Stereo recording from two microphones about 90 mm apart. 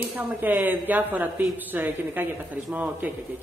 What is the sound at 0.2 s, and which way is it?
A woman's voice, 20° right (ahead or behind).